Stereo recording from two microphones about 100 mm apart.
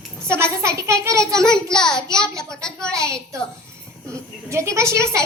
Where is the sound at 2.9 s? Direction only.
30° right (ahead or behind).